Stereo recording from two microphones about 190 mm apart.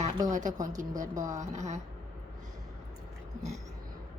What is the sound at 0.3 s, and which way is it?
Speech, 40° right (ahead or behind).